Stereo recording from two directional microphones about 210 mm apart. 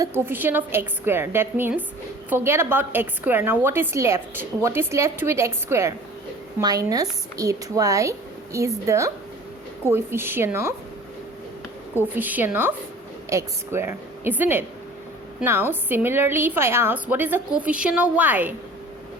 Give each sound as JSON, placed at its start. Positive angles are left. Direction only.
{"t": 0.0, "sound": "a woman's voice", "side_deg": -10}
{"t": 11.9, "sound": "a woman's voice", "side_deg": -10}